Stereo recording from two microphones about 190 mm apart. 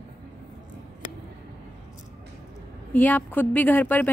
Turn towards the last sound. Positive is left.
turn(degrees=10)  # may be behind; listen again after turning